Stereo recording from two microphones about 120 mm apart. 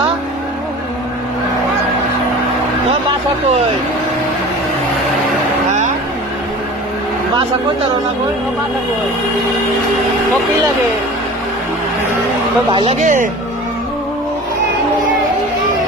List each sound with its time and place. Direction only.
12.7 s speech: 50° right (ahead or behind)
13.0 s a man's voice: 90° right